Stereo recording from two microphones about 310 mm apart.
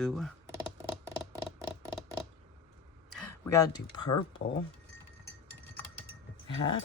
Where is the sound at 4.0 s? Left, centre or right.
Left.